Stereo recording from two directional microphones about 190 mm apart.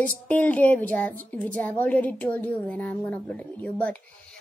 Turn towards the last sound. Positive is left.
turn(degrees=10)  # may be behind; listen again after turning